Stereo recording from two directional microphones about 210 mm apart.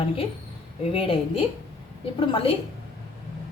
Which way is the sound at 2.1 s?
25° left (ahead or behind).